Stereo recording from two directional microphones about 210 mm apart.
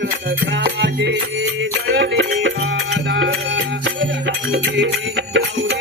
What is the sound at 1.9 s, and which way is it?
Music, 55° right (ahead or behind).